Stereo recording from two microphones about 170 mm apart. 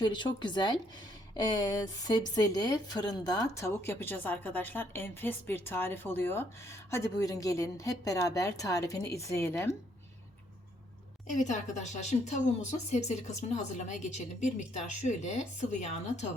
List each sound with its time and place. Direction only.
0.0 s a woman's voice: 30° left (ahead or behind)
11.3 s speech: 45° left (ahead or behind)